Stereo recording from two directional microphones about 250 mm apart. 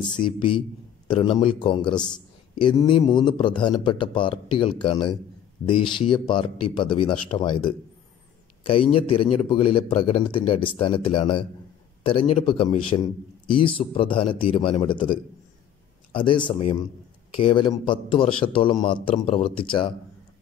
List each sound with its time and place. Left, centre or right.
0.1 s a man's voice: centre
8.9 s a man's voice: left